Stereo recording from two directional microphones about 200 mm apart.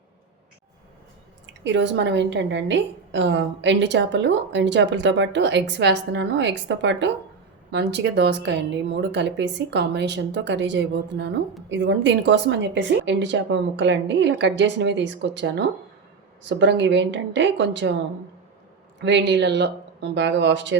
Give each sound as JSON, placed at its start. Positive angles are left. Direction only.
{"t": 1.6, "sound": "a woman's voice", "side_deg": -65}
{"t": 18.9, "sound": "a woman's voice", "side_deg": -60}